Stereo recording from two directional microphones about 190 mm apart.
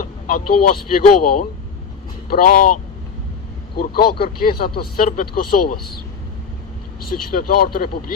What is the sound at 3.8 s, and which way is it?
Speech, 50° left (ahead or behind).